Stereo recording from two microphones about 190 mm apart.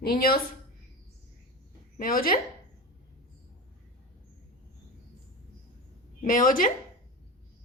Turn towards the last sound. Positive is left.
turn(degrees=45)  # may be behind; listen again after turning